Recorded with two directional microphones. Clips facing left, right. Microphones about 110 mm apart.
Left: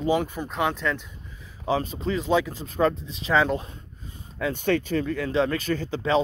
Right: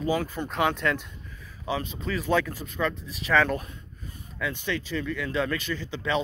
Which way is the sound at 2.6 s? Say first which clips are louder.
Left 6 dB; 35° left (ahead or behind).